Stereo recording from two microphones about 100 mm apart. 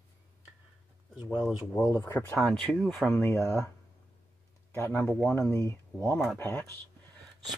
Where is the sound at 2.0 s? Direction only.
20° left (ahead or behind).